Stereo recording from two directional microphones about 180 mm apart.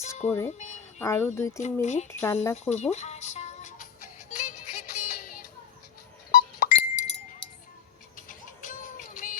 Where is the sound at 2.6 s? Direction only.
40° left (ahead or behind).